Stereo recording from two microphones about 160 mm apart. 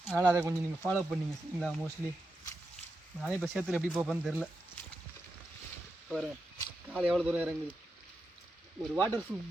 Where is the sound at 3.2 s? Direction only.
Centre (ahead or behind).